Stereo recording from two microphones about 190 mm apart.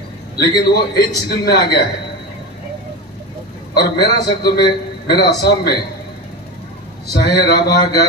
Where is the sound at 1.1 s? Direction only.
55° left (ahead or behind).